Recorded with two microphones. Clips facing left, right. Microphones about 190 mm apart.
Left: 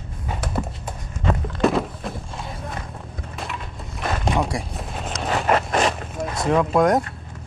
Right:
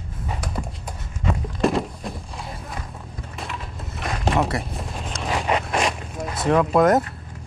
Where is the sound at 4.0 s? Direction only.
Centre (ahead or behind).